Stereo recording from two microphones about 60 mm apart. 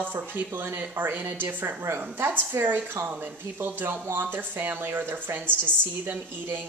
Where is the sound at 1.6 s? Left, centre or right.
Right.